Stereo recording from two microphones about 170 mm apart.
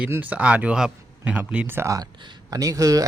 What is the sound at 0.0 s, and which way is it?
Speech, 10° right (ahead or behind).